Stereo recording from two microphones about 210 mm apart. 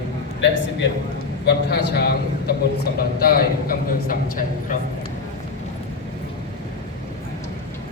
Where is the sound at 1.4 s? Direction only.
50° left (ahead or behind).